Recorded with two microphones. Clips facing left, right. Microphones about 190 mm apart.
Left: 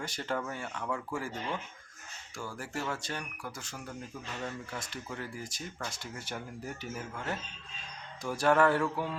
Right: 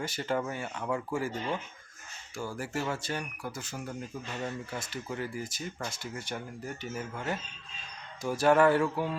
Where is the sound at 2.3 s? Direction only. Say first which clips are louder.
Right 4 dB; 5° right (ahead or behind).